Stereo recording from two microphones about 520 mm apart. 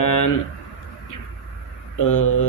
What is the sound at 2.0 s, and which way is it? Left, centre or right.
Speech, left.